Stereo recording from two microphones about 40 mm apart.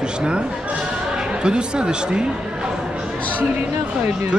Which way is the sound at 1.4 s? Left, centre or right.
Right.